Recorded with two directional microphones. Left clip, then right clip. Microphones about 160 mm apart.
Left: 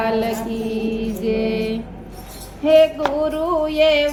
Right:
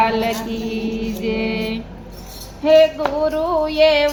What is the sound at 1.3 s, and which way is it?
Female singing, 30° left (ahead or behind).